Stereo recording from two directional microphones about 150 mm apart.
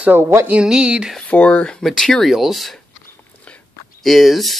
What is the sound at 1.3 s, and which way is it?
Speech, 10° left (ahead or behind).